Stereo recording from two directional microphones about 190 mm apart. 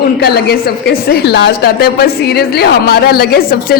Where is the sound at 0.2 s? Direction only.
60° left (ahead or behind).